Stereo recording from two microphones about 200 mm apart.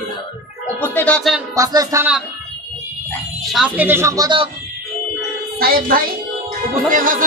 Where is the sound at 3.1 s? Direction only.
Centre (ahead or behind); by 4.5 s 20° right (ahead or behind).